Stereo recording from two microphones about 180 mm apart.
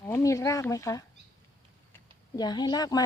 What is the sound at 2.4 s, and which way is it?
Speech, 25° left (ahead or behind).